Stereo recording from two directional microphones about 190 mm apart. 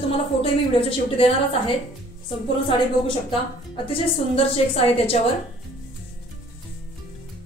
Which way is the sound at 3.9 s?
30° left (ahead or behind).